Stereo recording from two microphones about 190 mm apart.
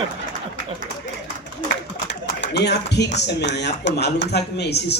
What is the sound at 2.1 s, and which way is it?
Speech, 65° left (ahead or behind).